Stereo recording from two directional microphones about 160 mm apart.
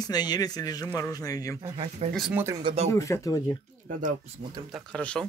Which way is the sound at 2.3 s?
15° right (ahead or behind).